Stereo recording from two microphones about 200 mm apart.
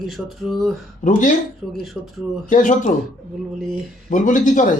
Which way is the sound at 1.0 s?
40° left (ahead or behind).